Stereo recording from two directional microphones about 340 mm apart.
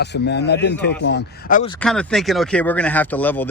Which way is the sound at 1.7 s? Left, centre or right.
Centre.